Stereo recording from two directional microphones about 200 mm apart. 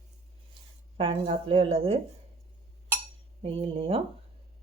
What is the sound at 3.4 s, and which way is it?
Speech, 30° right (ahead or behind).